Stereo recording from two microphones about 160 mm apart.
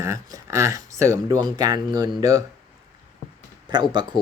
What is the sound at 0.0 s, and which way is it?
Speech, 20° right (ahead or behind).